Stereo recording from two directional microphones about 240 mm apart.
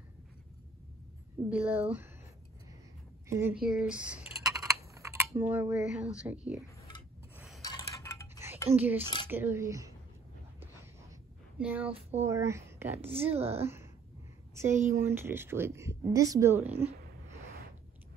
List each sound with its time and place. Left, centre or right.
1.5 s a woman's voice: centre
3.3 s speech: centre
3.6 s computer keyboard: centre
4.9 s speech: centre
7.6 s a sound: centre
8.7 s speech: centre
9.0 s speech: centre
9.3 s speech: centre
10.6 s a sound: centre
11.9 s speech: right
12.3 s speech: centre
13.1 s speech: right
13.6 s speech: centre
15.0 s speech: centre